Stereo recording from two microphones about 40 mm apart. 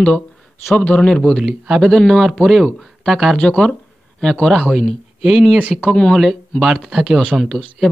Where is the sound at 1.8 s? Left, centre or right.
Centre.